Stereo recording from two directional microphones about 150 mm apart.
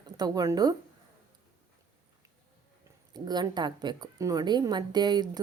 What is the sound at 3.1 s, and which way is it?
Speech, 30° right (ahead or behind).